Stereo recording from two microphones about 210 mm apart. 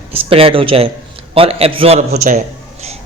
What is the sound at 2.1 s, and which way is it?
Speech, 40° right (ahead or behind).